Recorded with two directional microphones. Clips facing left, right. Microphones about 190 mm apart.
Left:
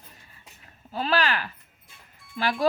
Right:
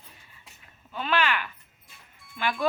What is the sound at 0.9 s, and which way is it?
Speech, 35° left (ahead or behind).